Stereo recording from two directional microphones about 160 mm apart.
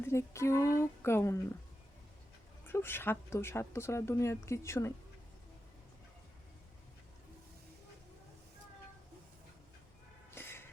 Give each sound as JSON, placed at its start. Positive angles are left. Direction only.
{"t": 0.1, "sound": "speech", "side_deg": 15}
{"t": 2.6, "sound": "speech", "side_deg": 15}
{"t": 10.3, "sound": "a sound", "side_deg": 15}